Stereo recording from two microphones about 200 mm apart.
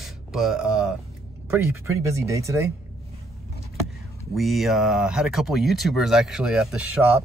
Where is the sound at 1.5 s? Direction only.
15° right (ahead or behind).